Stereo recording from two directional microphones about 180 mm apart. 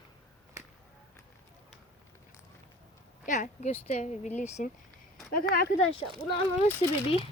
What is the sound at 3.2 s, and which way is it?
Speech, 40° left (ahead or behind).